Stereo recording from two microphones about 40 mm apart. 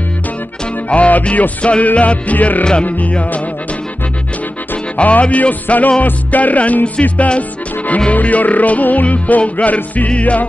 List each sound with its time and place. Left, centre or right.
0.8 s music: left
4.9 s music: left